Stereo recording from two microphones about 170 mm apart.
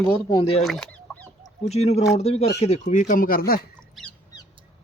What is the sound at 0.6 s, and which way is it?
Fowl, centre (ahead or behind).